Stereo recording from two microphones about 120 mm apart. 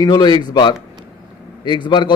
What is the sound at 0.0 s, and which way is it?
A man's voice, 35° left (ahead or behind).